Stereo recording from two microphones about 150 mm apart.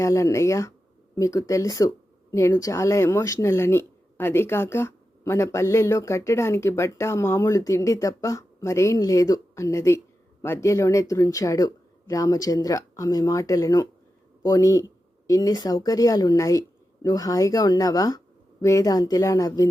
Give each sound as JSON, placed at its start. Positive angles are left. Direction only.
{"t": 0.0, "sound": "speech", "side_deg": 20}